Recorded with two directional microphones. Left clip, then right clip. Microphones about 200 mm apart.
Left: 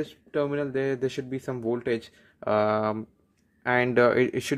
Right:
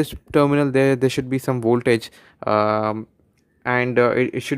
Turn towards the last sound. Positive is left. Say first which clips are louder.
# right 3 dB
turn(degrees=-10)  # may be behind; listen again after turning